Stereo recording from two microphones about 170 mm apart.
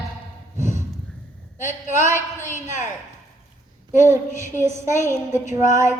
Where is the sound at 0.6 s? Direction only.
15° right (ahead or behind).